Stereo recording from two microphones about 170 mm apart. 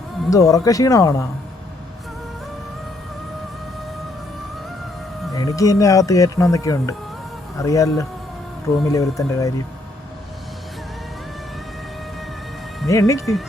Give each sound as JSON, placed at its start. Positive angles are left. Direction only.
{"t": 0.3, "sound": "speech", "side_deg": 20}
{"t": 5.3, "sound": "speech", "side_deg": 20}
{"t": 12.9, "sound": "speech", "side_deg": 15}